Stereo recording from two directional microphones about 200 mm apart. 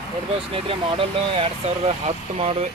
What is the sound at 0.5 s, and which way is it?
Speech, 25° right (ahead or behind).